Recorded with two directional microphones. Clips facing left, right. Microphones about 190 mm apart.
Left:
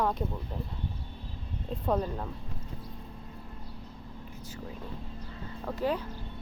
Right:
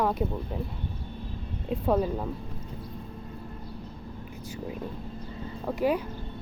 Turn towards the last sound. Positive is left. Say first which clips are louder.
# right 4 dB
turn(degrees=-10)  # may be behind; listen again after turning